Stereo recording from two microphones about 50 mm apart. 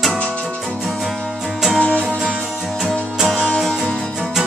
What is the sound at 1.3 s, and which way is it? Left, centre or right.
Music, centre.